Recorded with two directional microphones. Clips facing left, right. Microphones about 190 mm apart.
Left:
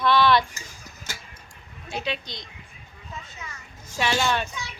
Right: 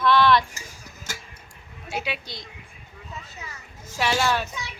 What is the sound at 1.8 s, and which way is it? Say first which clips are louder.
Speech: even; 10° right (ahead or behind).